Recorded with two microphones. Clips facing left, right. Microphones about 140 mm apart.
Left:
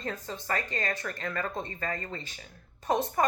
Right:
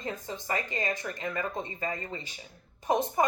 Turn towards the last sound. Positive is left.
turn(degrees=-20)  # may be behind; listen again after turning